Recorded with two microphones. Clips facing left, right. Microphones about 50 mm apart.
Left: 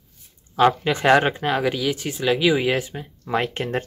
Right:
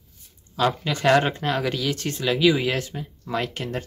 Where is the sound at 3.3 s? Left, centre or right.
Left.